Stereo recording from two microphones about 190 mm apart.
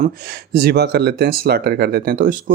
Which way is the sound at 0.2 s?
55° right (ahead or behind).